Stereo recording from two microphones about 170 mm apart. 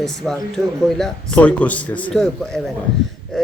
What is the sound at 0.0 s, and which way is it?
A man's voice, centre (ahead or behind).